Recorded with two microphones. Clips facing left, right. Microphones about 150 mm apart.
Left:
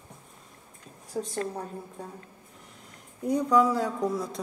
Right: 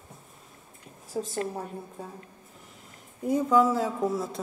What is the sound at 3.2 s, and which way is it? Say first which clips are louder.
A woman's voice: right 1 dB; 5° right (ahead or behind).